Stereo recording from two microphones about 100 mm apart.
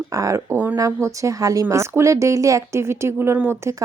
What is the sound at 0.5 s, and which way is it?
Speech, 15° right (ahead or behind).